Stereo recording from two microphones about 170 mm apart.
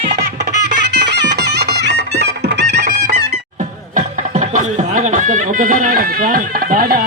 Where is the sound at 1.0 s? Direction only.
90° right.